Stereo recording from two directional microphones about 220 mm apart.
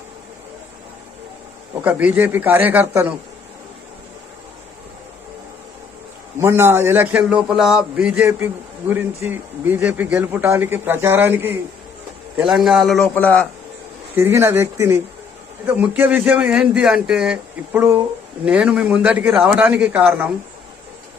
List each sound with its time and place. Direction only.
1.8 s a man's voice: 5° right (ahead or behind)
6.4 s a man's voice: 10° right (ahead or behind); by 13.5 s 5° left (ahead or behind)
14.2 s a man's voice: 10° right (ahead or behind)